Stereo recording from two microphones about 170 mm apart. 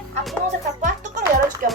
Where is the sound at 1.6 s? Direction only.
55° right (ahead or behind).